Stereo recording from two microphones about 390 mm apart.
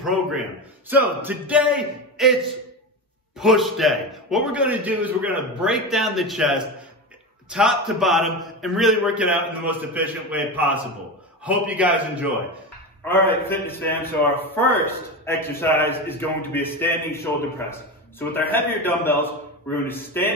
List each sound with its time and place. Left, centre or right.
0.8 s a man's voice: centre
3.3 s a man's voice: centre